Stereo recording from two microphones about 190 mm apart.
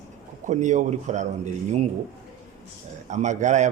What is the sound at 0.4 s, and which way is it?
Speech, 40° right (ahead or behind).